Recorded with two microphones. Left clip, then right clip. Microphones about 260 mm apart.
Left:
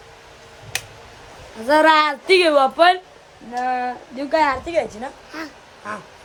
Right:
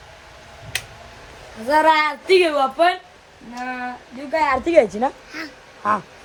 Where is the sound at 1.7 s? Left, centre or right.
Centre.